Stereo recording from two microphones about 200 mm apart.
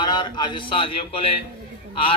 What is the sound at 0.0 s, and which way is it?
A man's voice, 25° left (ahead or behind).